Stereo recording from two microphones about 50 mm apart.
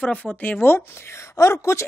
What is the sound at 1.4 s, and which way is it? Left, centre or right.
Speech, left.